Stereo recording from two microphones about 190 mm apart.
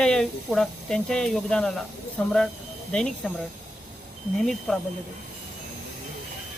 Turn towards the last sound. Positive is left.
turn(degrees=0)  # may be behind; listen again after turning